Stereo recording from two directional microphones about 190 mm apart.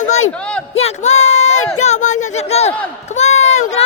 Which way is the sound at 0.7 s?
35° left (ahead or behind).